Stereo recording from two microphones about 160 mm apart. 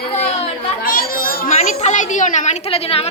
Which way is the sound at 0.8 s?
65° left (ahead or behind).